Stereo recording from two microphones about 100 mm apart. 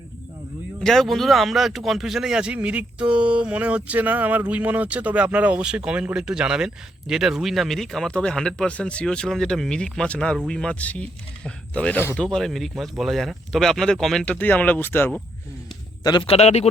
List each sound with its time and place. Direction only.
0.8 s speech: 5° left (ahead or behind)
14.3 s speech: 15° left (ahead or behind)
16.2 s a man's voice: 90° left